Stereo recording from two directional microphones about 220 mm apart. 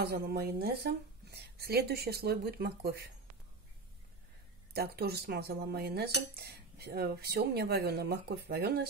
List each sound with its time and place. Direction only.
0.0 s speech: 45° right (ahead or behind)
4.7 s speech: 45° right (ahead or behind)